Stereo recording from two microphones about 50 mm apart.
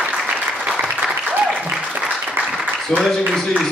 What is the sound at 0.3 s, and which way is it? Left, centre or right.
Applause, right.